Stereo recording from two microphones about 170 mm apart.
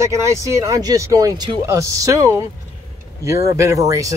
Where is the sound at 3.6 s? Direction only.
15° right (ahead or behind).